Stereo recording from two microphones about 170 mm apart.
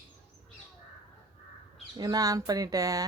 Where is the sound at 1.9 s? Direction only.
20° right (ahead or behind).